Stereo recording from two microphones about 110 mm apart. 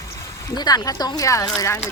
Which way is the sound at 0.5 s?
35° left (ahead or behind).